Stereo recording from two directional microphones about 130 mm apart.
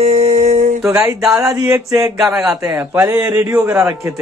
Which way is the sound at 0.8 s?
20° right (ahead or behind).